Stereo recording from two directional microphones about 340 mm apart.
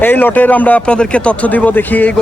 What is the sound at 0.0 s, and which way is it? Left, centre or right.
Speech, centre.